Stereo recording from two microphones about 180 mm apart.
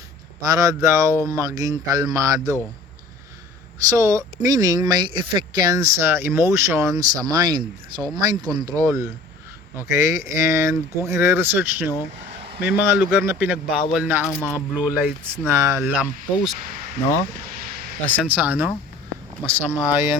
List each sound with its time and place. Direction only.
0.4 s speech: 20° right (ahead or behind)
3.8 s speech: 15° right (ahead or behind)
18.2 s speech: 10° right (ahead or behind)